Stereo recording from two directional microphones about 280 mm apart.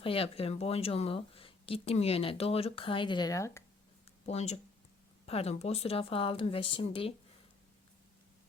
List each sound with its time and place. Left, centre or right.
0.0 s speech: centre
4.3 s speech: left